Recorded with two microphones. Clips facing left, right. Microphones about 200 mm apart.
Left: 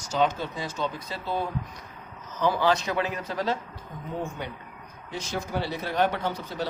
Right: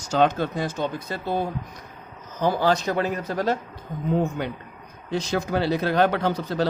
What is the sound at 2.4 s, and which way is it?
Speech, 40° right (ahead or behind).